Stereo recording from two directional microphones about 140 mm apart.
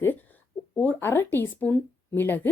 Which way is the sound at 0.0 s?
15° left (ahead or behind).